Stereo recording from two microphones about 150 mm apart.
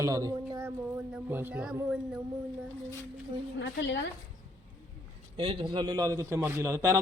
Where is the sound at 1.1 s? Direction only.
10° right (ahead or behind).